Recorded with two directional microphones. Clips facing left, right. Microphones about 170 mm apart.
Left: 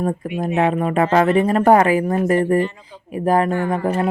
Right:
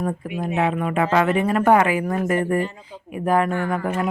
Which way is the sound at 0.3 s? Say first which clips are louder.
Left 4 dB; 40° left (ahead or behind).